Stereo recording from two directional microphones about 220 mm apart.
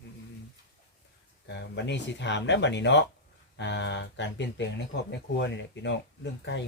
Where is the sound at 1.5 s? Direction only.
50° left (ahead or behind).